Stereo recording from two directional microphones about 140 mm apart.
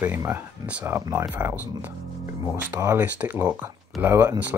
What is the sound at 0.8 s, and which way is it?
Speech, 20° right (ahead or behind).